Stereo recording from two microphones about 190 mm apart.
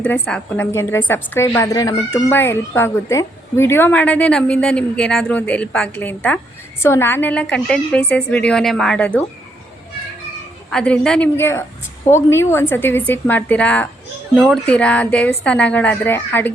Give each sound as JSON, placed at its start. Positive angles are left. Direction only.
{"t": 0.0, "sound": "a woman's voice", "side_deg": 5}
{"t": 10.7, "sound": "a woman's voice", "side_deg": 5}